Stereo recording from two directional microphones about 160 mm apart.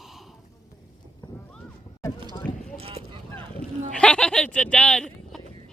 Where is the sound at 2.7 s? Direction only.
35° right (ahead or behind).